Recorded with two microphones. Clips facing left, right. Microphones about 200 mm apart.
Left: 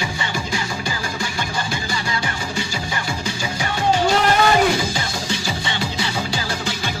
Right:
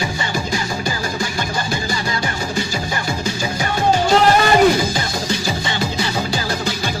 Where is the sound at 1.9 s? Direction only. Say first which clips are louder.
Right 3 dB; 40° right (ahead or behind).